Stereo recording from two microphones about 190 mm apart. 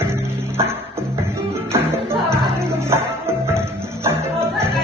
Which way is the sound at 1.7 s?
15° right (ahead or behind).